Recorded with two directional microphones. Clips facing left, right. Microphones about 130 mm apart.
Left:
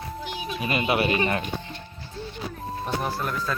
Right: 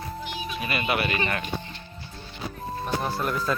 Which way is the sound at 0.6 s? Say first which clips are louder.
Left 3 dB; 20° left (ahead or behind).